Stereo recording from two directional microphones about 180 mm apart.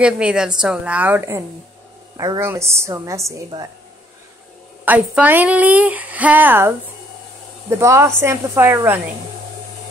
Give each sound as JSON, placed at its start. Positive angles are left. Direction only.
{"t": 0.0, "sound": "a woman's voice", "side_deg": -5}
{"t": 4.8, "sound": "speech", "side_deg": -10}
{"t": 7.8, "sound": "speech", "side_deg": -15}